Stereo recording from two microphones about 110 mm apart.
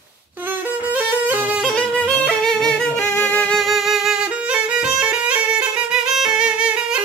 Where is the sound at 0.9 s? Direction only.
15° right (ahead or behind).